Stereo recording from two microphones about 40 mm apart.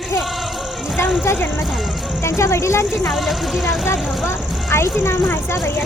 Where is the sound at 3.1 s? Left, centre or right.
Centre.